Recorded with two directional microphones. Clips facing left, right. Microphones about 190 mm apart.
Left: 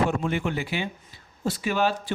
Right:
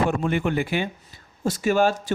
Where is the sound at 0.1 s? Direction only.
55° right (ahead or behind).